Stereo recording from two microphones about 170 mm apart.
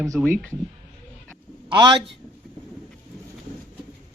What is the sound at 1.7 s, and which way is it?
Speech, 30° right (ahead or behind).